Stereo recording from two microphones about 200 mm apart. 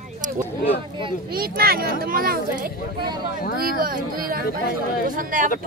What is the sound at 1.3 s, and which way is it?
Speech, 50° right (ahead or behind).